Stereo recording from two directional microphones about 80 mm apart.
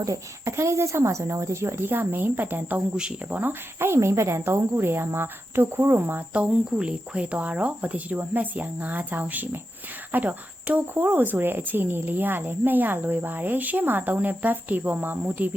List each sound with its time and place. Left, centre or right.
0.0 s speech: right
2.9 s speech: centre
3.8 s speech: right